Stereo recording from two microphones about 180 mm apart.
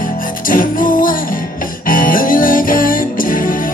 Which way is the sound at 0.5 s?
50° left (ahead or behind).